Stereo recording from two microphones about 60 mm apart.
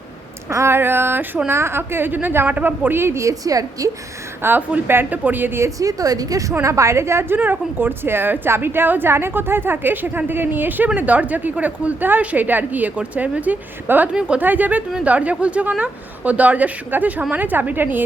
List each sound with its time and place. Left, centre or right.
0.5 s a woman's voice: right
3.0 s a woman's voice: right
3.2 s a woman's voice: right
4.4 s a woman's voice: right
5.8 s a woman's voice: right
6.6 s a woman's voice: right
7.3 s a woman's voice: right
14.1 s a woman's voice: centre
14.4 s a woman's voice: right